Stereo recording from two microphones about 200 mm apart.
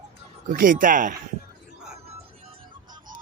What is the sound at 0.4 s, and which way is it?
Speech, 40° right (ahead or behind).